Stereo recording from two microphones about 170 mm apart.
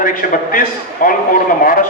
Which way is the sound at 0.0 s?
55° left (ahead or behind).